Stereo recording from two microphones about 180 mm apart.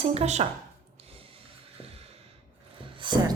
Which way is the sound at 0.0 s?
35° right (ahead or behind).